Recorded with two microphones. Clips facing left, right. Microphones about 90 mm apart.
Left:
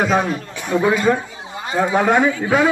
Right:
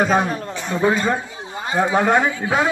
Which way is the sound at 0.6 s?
10° left (ahead or behind).